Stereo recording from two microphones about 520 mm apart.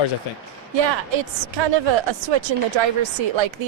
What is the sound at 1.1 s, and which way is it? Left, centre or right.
Speech, right.